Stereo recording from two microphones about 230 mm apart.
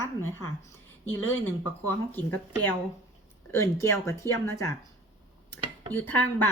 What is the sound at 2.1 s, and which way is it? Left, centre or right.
Speech, centre.